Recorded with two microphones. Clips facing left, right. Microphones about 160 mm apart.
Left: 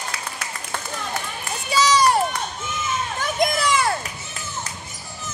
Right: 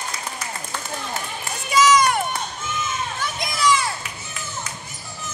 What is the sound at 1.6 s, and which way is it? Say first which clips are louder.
Run: right 1 dB; 35° left (ahead or behind).